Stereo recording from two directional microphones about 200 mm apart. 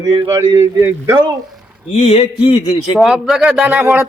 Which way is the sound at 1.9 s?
30° left (ahead or behind).